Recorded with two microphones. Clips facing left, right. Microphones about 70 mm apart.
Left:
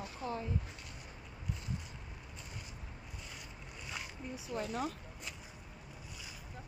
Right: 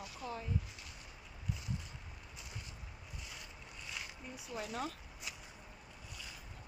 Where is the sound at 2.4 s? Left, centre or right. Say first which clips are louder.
Left 1 dB; centre.